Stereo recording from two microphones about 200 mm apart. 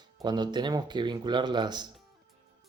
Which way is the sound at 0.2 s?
20° right (ahead or behind).